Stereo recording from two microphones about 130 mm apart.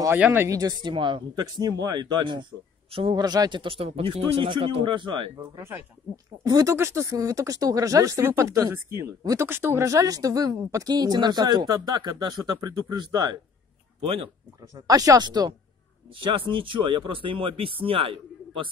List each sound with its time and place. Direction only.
0.2 s speech: 15° right (ahead or behind)
0.6 s speech: 35° right (ahead or behind)
3.2 s speech: 30° right (ahead or behind)
6.4 s speech: 25° right (ahead or behind)
14.0 s speech: 45° right (ahead or behind)
14.6 s speech: 25° right (ahead or behind); by 18.7 s 45° right (ahead or behind)